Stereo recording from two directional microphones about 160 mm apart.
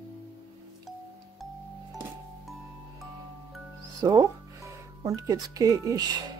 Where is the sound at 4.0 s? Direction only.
20° right (ahead or behind).